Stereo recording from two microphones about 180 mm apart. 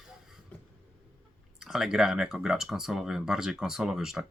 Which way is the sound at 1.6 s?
Centre (ahead or behind).